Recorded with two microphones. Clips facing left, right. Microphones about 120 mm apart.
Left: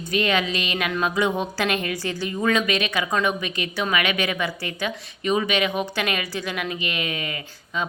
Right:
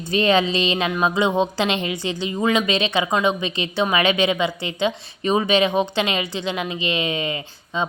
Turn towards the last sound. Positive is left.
turn(degrees=-25)  # may be behind; listen again after turning